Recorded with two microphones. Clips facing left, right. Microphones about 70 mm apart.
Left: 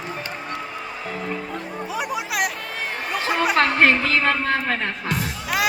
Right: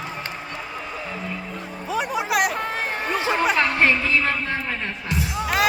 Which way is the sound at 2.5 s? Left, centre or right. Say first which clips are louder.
Right 3 dB; right.